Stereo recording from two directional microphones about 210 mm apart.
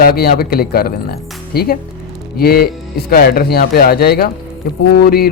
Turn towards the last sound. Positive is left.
turn(degrees=50)  # may be behind; listen again after turning